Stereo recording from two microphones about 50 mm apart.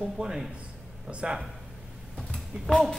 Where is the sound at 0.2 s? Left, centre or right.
Right.